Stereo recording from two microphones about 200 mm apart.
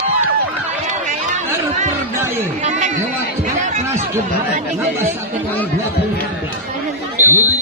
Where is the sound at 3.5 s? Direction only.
35° right (ahead or behind).